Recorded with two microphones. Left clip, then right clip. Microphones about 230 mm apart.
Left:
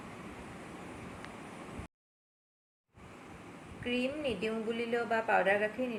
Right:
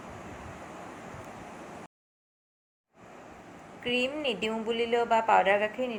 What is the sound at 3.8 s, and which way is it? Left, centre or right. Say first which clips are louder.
A woman's voice: right 5 dB; centre.